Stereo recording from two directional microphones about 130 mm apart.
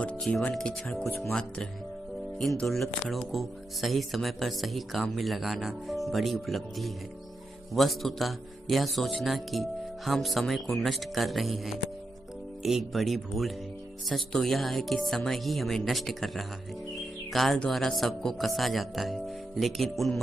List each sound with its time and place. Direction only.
0.0 s speech: 10° left (ahead or behind)